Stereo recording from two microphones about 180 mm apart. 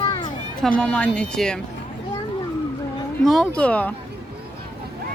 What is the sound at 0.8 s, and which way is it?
Speech, 5° left (ahead or behind).